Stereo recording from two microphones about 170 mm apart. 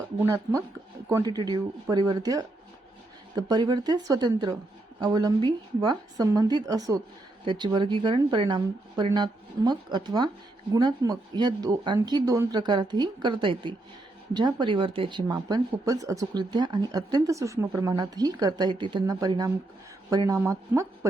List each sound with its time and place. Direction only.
0.2 s speech: 15° right (ahead or behind)